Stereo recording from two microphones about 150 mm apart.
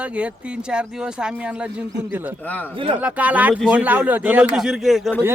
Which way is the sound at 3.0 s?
10° right (ahead or behind).